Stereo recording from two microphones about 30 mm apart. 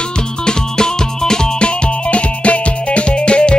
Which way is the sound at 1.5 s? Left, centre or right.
Left.